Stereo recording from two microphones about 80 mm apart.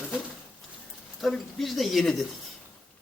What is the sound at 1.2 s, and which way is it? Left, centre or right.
Speech, centre.